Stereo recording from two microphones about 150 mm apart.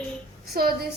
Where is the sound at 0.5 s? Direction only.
90° right.